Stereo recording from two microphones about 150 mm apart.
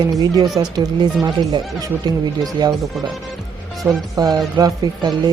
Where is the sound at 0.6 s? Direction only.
25° right (ahead or behind).